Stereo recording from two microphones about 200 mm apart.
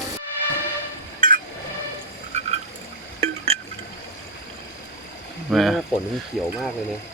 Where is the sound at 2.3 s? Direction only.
35° right (ahead or behind).